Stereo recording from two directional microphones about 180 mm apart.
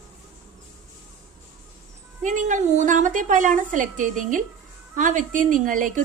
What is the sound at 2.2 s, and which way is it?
A woman's voice, 45° right (ahead or behind).